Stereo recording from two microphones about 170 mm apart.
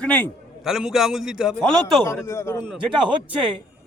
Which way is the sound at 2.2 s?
15° left (ahead or behind).